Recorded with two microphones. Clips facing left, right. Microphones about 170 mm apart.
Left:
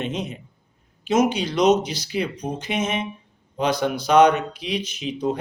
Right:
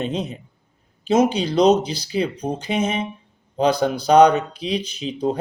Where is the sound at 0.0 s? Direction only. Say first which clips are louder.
Right 3 dB; 30° right (ahead or behind).